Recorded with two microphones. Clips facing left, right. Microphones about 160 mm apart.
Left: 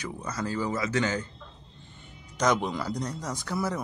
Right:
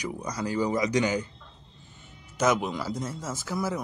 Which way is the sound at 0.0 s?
15° right (ahead or behind).